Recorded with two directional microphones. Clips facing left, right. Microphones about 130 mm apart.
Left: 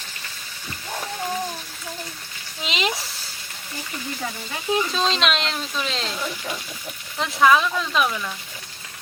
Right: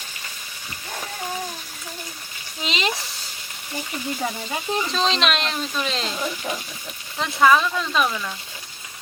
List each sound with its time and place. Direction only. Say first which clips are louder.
2.6 s sizzle: even; centre (ahead or behind)
4.2 s speech: right 4 dB; 20° right (ahead or behind)
4.9 s speech: even; centre (ahead or behind)
6.1 s speech: right 2 dB; 20° right (ahead or behind)
7.2 s speech: even; centre (ahead or behind)